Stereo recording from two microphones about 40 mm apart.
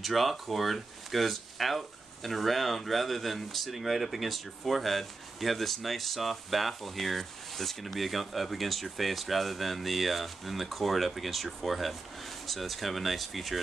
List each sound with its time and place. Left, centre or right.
0.0 s speech: centre